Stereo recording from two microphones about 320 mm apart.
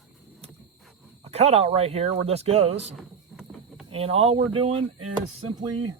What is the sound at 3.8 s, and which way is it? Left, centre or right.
Speech, centre.